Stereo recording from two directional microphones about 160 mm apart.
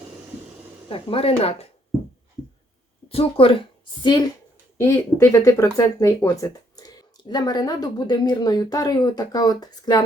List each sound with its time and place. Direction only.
0.9 s speech: 35° left (ahead or behind)
3.1 s speech: 35° left (ahead or behind)
4.8 s speech: 20° left (ahead or behind)